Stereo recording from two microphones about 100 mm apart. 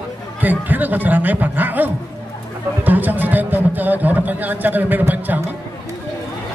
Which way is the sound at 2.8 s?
20° right (ahead or behind).